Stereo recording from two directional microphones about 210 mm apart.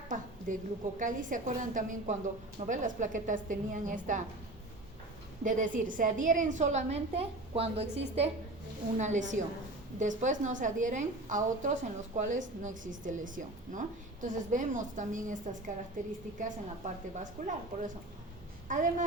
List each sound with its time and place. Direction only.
0.1 s a woman's voice: 40° right (ahead or behind)
5.4 s a woman's voice: 40° right (ahead or behind)
9.0 s a woman's voice: 35° right (ahead or behind)